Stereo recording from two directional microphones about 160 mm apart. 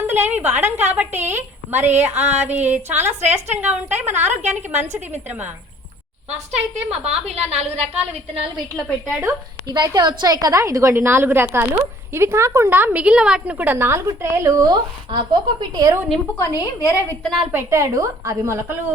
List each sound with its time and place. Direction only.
0.1 s a woman's voice: 10° right (ahead or behind)
6.3 s a woman's voice: 40° right (ahead or behind)
9.6 s a woman's voice: 25° right (ahead or behind)
16.4 s a woman's voice: 20° left (ahead or behind)
17.2 s a woman's voice: centre (ahead or behind)
17.5 s a woman's voice: 15° right (ahead or behind)